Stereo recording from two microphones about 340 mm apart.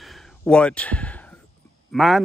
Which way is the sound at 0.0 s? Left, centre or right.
Centre.